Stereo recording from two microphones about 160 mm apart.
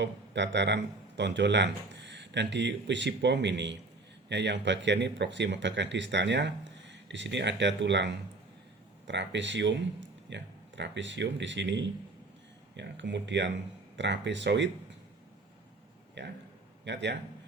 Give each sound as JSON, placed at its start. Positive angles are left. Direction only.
{"t": 0.0, "sound": "speech", "side_deg": -90}
{"t": 16.2, "sound": "a sound", "side_deg": -90}
{"t": 16.8, "sound": "speech", "side_deg": -90}